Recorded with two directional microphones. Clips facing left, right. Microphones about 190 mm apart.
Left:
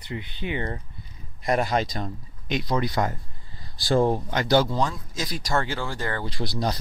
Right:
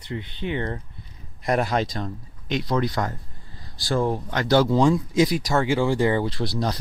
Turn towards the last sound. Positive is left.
turn(degrees=0)  # may be behind; listen again after turning